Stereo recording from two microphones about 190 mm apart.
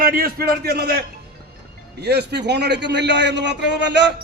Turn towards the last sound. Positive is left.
turn(degrees=-65)  # may be behind; listen again after turning